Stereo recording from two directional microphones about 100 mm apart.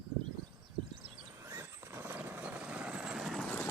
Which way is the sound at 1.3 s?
25° right (ahead or behind).